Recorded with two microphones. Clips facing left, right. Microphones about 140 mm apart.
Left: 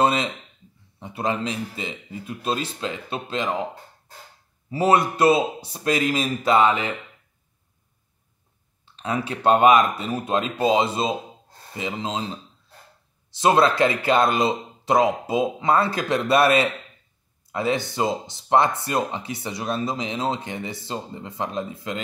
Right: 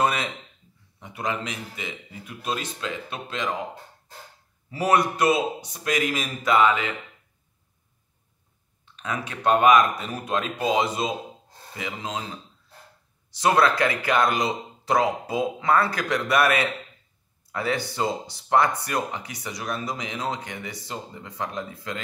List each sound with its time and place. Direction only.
0.0 s speech: 25° left (ahead or behind)
4.6 s speech: 25° left (ahead or behind)
8.9 s speech: 30° left (ahead or behind)
13.3 s speech: 25° left (ahead or behind)